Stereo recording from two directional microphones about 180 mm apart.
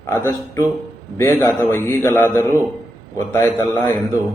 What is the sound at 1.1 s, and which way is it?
Speech, 15° left (ahead or behind).